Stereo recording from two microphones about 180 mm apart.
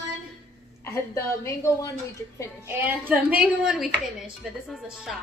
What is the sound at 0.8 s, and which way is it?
A woman's voice, 15° left (ahead or behind).